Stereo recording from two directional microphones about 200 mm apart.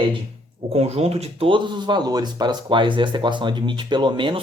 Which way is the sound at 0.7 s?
30° right (ahead or behind).